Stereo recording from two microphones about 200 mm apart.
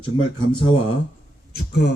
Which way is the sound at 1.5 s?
55° left (ahead or behind).